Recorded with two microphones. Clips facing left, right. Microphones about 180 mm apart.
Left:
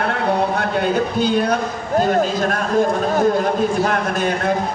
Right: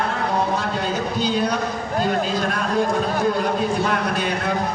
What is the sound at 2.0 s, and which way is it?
A man's voice, 45° left (ahead or behind).